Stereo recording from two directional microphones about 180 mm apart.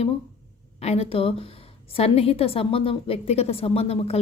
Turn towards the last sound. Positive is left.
turn(degrees=35)  # may be behind; listen again after turning